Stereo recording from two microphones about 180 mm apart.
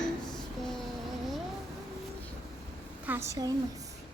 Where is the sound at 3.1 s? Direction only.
15° right (ahead or behind).